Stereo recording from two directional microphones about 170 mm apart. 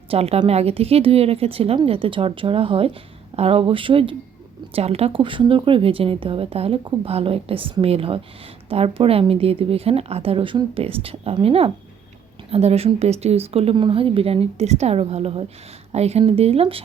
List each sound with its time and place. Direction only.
0.1 s speech: 35° right (ahead or behind)